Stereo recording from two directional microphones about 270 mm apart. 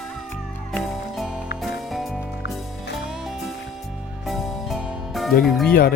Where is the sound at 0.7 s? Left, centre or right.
Centre.